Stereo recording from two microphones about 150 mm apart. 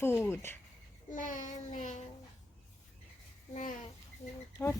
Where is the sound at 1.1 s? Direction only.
60° left (ahead or behind).